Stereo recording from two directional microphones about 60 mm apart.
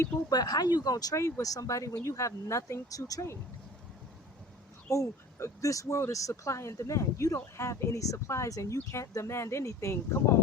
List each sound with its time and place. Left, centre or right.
0.3 s speech: left
1.1 s speech: left
4.9 s speech: left